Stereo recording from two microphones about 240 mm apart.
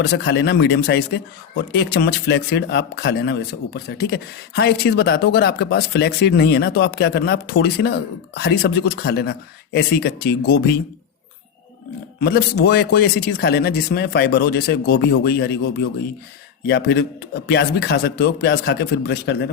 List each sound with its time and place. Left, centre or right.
0.0 s speech: left
12.2 s a man's voice: left